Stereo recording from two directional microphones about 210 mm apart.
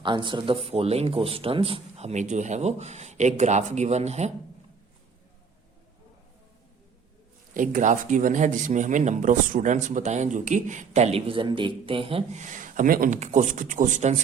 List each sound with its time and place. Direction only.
0.0 s speech: 20° right (ahead or behind)
7.5 s speech: 40° right (ahead or behind)